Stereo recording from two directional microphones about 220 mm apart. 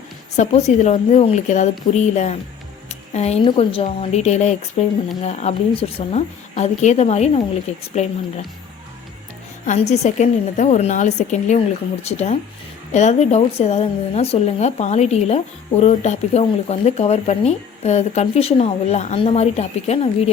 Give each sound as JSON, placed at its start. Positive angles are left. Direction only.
{"t": 0.3, "sound": "a woman's voice", "side_deg": 30}
{"t": 9.6, "sound": "a woman's voice", "side_deg": 30}